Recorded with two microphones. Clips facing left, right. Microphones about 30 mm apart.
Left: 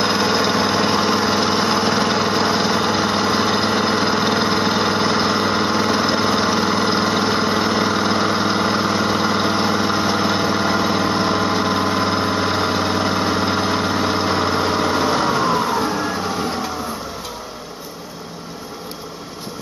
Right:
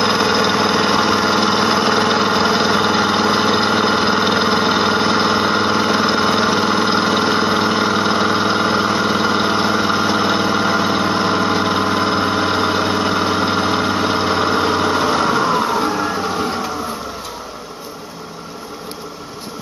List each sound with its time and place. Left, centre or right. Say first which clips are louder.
0.0 s vehicle: right 2 dB; centre